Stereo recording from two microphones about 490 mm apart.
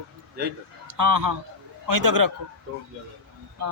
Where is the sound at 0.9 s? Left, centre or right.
Right.